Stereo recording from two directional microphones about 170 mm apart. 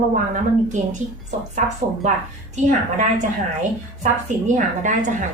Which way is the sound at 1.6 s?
45° right (ahead or behind).